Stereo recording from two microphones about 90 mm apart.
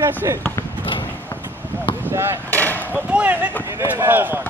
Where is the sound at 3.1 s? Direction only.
15° right (ahead or behind).